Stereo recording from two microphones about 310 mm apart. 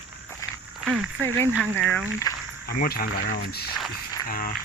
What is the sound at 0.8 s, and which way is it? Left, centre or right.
Speech, centre.